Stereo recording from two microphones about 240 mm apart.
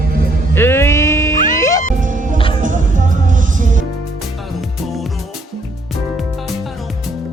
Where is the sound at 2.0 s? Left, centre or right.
Right.